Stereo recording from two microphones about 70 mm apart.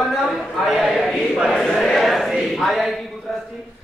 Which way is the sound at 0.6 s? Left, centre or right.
Centre.